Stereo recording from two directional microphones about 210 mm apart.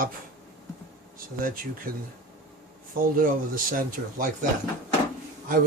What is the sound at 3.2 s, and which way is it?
Speech, 40° right (ahead or behind).